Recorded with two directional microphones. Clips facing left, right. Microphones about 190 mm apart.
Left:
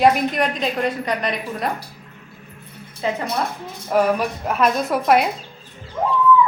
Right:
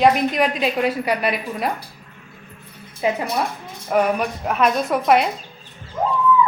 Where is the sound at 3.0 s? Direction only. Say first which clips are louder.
Right 2 dB; 15° right (ahead or behind).